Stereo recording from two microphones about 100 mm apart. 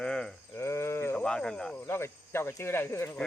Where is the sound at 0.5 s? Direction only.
25° left (ahead or behind).